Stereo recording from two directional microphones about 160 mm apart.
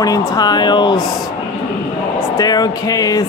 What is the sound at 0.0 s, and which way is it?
Speech, 20° left (ahead or behind).